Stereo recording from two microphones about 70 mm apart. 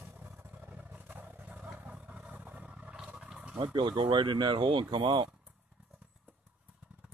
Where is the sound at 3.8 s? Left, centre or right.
Right.